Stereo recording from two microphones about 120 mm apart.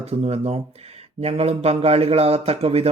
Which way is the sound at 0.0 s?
55° right (ahead or behind).